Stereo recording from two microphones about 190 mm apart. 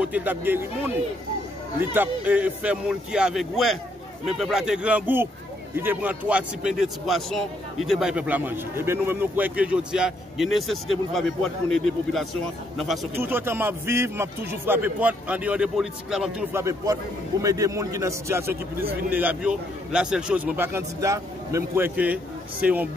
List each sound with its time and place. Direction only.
0.0 s a man's voice: 10° right (ahead or behind)
13.1 s a man's voice: 10° right (ahead or behind)
16.5 s a man's voice: 15° right (ahead or behind)